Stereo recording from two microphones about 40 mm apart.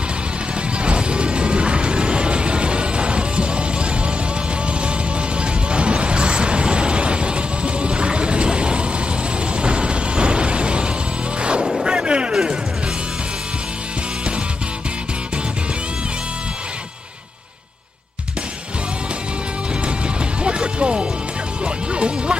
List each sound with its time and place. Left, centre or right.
0.6 s music: right
5.4 s music: right
9.6 s a sound: right
11.3 s music: right
11.8 s a sound: right
20.4 s music: right